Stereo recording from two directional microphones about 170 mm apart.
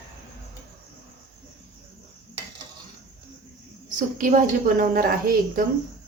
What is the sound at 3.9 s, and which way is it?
A woman's voice, 50° right (ahead or behind).